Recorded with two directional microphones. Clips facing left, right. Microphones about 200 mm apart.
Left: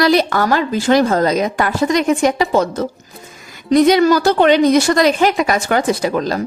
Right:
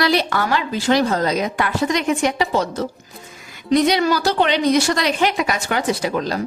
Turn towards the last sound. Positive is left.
turn(degrees=45)  # may be behind; listen again after turning